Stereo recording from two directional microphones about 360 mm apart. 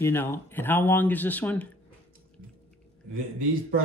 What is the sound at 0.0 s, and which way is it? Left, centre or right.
Speech, centre.